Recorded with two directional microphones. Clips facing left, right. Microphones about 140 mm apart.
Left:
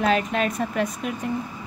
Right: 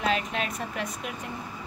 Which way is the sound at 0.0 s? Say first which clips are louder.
Left 6 dB; 50° left (ahead or behind).